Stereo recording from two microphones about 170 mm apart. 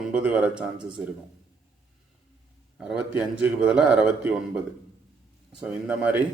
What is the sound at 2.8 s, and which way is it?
A man's voice, 5° right (ahead or behind).